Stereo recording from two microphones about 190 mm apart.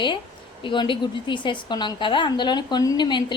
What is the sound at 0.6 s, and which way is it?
A woman's voice, 25° left (ahead or behind).